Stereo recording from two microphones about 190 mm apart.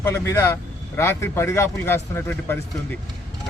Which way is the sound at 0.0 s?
15° left (ahead or behind).